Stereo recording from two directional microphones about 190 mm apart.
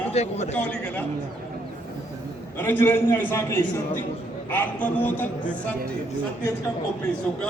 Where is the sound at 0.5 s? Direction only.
5° left (ahead or behind).